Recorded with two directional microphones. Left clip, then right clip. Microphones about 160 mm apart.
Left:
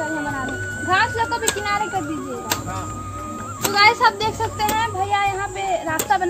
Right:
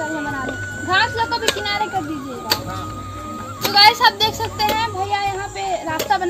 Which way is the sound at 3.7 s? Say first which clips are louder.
Right 3 dB; 50° right (ahead or behind).